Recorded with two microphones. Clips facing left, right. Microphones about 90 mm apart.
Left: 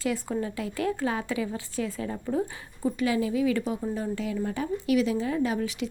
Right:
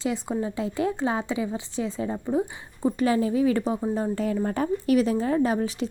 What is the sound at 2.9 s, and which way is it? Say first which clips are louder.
A woman's voice: right 3 dB; 35° right (ahead or behind).